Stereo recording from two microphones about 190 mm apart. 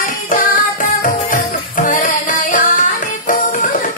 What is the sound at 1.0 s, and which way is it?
Music, 45° left (ahead or behind).